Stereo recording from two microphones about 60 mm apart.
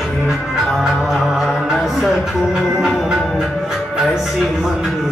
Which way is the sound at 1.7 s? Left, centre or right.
Centre.